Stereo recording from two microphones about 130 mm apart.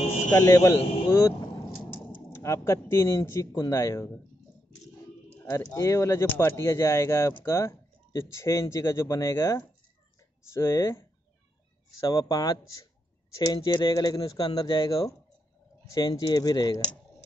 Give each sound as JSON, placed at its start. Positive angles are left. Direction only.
{"t": 0.3, "sound": "speech", "side_deg": 25}
{"t": 2.3, "sound": "speech", "side_deg": 20}
{"t": 5.5, "sound": "speech", "side_deg": 20}
{"t": 12.1, "sound": "speech", "side_deg": 25}